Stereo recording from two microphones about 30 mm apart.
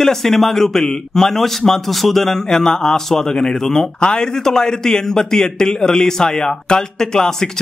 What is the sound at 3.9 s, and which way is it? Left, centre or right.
A man's voice, left.